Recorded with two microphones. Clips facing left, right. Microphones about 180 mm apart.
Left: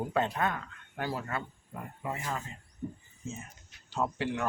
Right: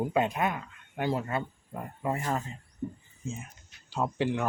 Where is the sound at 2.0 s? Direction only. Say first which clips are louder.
Right 6 dB; 45° right (ahead or behind).